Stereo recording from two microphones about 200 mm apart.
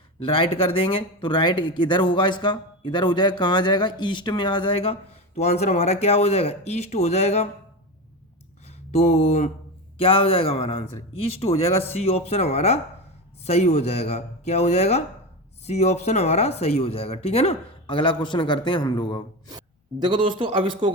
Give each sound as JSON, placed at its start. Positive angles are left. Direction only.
{"t": 0.2, "sound": "speech", "side_deg": 25}
{"t": 8.6, "sound": "speech", "side_deg": 35}
{"t": 19.5, "sound": "a man's voice", "side_deg": -25}